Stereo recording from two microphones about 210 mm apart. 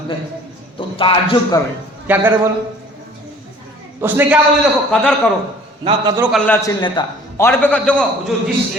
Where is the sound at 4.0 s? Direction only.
10° right (ahead or behind).